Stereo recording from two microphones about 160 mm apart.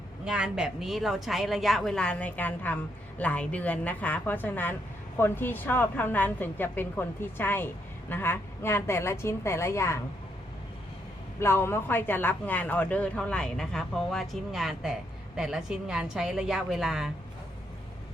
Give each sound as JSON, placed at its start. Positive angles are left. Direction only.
{"t": 0.3, "sound": "speech", "side_deg": -5}
{"t": 11.3, "sound": "speech", "side_deg": 15}